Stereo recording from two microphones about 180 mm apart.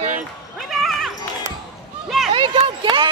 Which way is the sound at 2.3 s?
30° right (ahead or behind).